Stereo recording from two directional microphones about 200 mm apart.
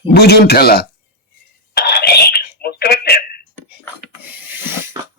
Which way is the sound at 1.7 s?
55° left (ahead or behind).